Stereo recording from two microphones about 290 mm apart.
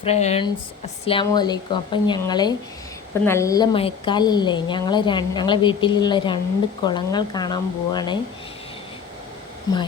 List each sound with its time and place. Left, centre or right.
0.0 s a woman's voice: left
9.7 s a woman's voice: centre